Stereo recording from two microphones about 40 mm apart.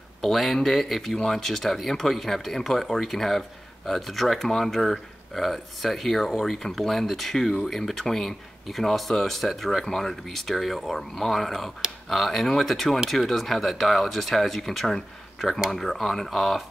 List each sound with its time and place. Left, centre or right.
0.2 s speech: centre
1.1 s speech: centre
1.4 s speech: centre